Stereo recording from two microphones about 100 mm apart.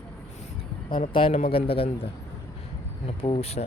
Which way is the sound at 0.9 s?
60° left (ahead or behind).